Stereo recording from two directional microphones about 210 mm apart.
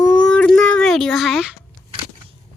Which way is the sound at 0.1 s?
5° left (ahead or behind).